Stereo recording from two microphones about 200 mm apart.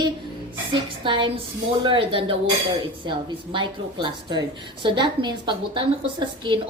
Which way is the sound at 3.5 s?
25° right (ahead or behind).